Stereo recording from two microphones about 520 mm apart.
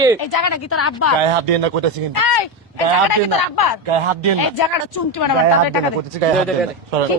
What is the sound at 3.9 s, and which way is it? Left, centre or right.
Speech, right.